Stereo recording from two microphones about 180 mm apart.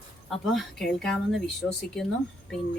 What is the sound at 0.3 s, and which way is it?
Speech, centre (ahead or behind).